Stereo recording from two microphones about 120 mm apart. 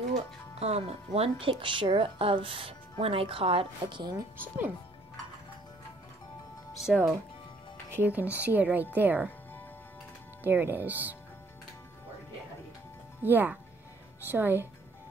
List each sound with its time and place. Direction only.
0.1 s speech: 60° right (ahead or behind); by 4.2 s 40° right (ahead or behind)
4.4 s speech: 15° right (ahead or behind)
6.7 s music: 5° right (ahead or behind)
7.9 s speech: 15° right (ahead or behind)
10.4 s speech: 15° right (ahead or behind)
13.2 s speech: 15° right (ahead or behind)